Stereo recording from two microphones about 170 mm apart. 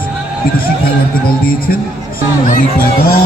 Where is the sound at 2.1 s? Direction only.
60° left (ahead or behind).